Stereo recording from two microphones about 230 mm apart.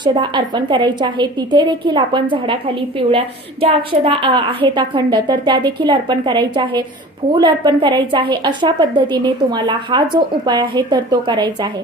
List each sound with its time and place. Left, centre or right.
0.0 s a woman's voice: centre